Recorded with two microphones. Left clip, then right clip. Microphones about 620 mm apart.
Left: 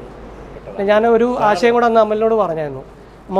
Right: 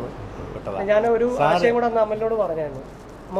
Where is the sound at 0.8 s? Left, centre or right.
Left.